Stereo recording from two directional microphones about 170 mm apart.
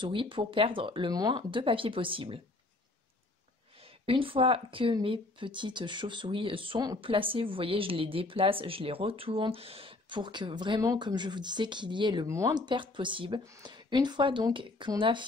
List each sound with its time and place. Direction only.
0.0 s speech: 30° right (ahead or behind)
4.0 s speech: 30° right (ahead or behind)